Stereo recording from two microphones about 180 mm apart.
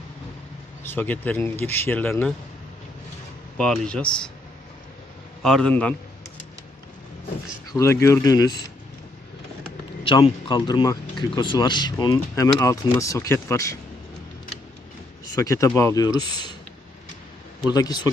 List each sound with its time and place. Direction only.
0.9 s speech: 10° left (ahead or behind)
3.6 s speech: 5° left (ahead or behind)
5.4 s speech: 5° left (ahead or behind)
7.7 s speech: 15° left (ahead or behind)
10.0 s speech: 30° left (ahead or behind)
15.4 s speech: 15° left (ahead or behind)
17.7 s speech: 20° left (ahead or behind)